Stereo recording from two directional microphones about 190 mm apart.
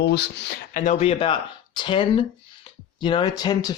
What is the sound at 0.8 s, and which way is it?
Speech, 35° left (ahead or behind).